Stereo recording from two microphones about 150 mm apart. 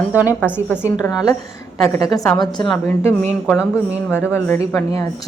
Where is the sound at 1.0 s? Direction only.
25° left (ahead or behind).